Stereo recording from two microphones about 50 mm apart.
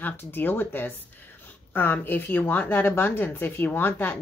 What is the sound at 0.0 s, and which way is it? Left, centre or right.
A woman's voice, left.